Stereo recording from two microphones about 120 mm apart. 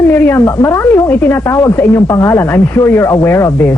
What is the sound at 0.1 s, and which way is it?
Speech, 20° left (ahead or behind).